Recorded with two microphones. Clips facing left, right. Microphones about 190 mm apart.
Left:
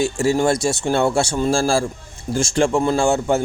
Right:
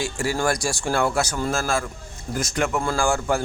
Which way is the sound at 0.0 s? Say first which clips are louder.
Left 6 dB; 25° left (ahead or behind).